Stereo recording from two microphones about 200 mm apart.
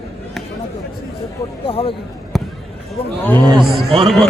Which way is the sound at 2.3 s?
Centre (ahead or behind).